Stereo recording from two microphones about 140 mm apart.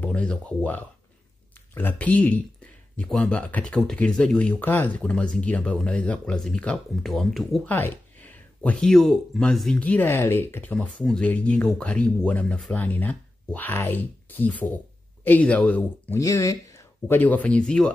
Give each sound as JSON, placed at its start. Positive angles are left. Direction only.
{"t": 0.0, "sound": "speech", "side_deg": 10}
{"t": 7.6, "sound": "speech", "side_deg": 15}
{"t": 16.2, "sound": "speech", "side_deg": 25}
{"t": 17.2, "sound": "speech", "side_deg": 10}